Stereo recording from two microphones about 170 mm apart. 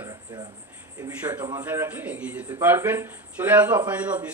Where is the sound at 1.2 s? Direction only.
10° right (ahead or behind).